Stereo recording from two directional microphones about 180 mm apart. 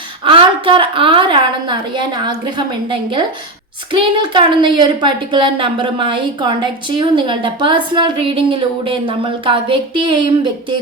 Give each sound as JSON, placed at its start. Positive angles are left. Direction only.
{"t": 0.3, "sound": "a woman's voice", "side_deg": -30}